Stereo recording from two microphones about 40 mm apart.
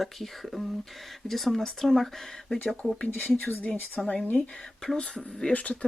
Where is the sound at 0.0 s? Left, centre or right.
Centre.